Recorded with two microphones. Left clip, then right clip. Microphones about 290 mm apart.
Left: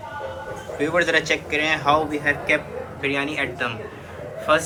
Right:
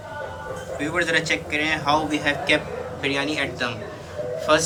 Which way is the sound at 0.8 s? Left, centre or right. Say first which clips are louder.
Left 3 dB; centre.